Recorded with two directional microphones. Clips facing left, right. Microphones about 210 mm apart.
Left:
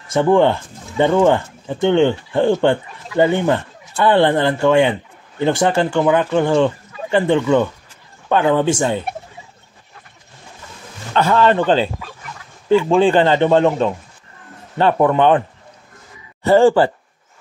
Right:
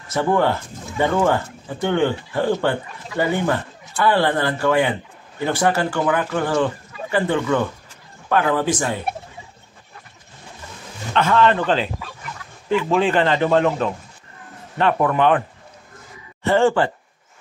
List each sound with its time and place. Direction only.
0.1 s speech: 25° left (ahead or behind)
11.1 s a man's voice: 35° left (ahead or behind)
16.4 s a man's voice: 35° left (ahead or behind)